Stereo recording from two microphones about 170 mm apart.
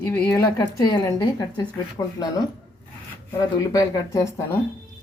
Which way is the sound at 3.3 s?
20° left (ahead or behind).